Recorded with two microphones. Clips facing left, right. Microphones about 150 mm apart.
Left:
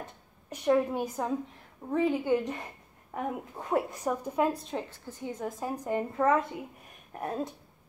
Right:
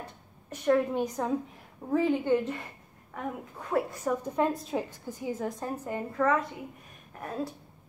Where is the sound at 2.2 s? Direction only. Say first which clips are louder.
Right 1 dB; 15° left (ahead or behind).